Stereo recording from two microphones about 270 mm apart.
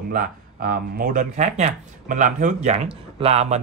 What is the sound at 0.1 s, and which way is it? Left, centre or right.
A man's voice, right.